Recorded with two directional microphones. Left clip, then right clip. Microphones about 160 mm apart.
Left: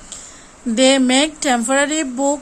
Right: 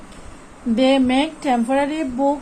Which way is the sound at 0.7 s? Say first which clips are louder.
Left 3 dB; 45° left (ahead or behind).